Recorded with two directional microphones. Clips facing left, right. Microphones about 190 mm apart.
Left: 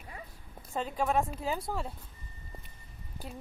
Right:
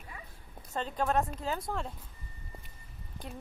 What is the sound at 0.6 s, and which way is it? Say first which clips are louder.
Speech: left 1 dB; 5° left (ahead or behind).